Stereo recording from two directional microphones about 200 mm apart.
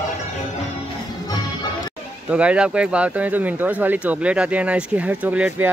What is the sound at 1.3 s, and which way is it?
Music, 20° left (ahead or behind).